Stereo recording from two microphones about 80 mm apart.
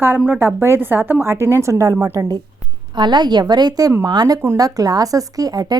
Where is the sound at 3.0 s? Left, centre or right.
Right.